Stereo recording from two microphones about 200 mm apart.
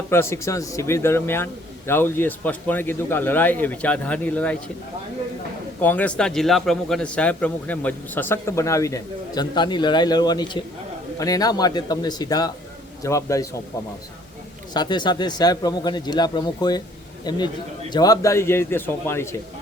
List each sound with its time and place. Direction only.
0.1 s speech: 10° left (ahead or behind)
5.8 s speech: 10° left (ahead or behind)
14.7 s speech: 20° left (ahead or behind)